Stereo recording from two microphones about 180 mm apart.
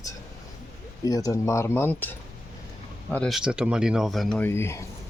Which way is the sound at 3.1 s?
Centre (ahead or behind).